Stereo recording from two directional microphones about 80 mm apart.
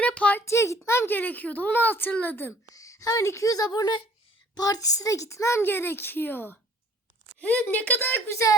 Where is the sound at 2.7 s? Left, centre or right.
Left.